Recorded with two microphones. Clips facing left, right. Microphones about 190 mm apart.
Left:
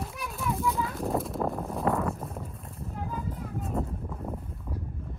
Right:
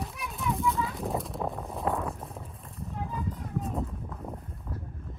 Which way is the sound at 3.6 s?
Centre (ahead or behind).